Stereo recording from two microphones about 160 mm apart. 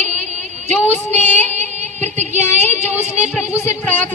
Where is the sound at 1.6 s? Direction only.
45° right (ahead or behind).